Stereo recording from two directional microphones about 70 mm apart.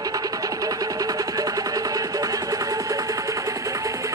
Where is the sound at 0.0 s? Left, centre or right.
Right.